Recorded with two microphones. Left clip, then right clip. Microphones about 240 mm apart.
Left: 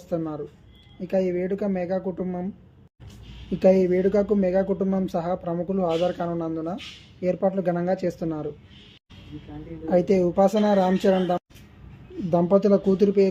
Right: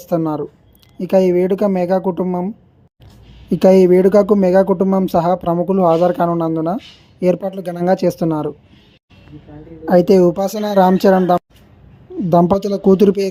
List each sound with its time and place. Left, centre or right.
0.1 s speech: right
3.6 s a woman's voice: right
9.8 s a woman's voice: right